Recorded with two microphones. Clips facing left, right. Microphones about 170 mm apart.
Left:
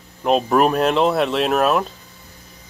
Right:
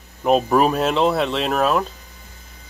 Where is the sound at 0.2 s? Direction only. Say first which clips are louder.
Even; centre (ahead or behind).